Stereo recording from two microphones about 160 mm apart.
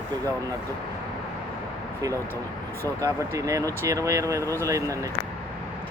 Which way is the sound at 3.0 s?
20° right (ahead or behind).